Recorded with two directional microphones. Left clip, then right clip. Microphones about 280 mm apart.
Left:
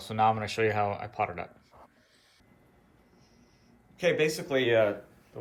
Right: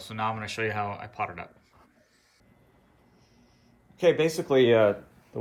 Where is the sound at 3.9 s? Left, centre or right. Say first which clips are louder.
Right 4 dB; centre.